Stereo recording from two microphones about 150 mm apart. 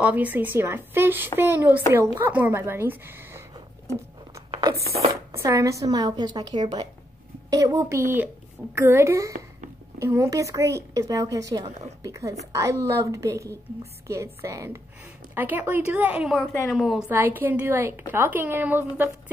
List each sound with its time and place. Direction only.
0.0 s a woman's voice: 10° right (ahead or behind)
4.6 s a sound: 30° right (ahead or behind)
4.9 s a woman's voice: 20° right (ahead or behind); by 17.0 s 5° right (ahead or behind)
17.1 s a woman's voice: 15° right (ahead or behind)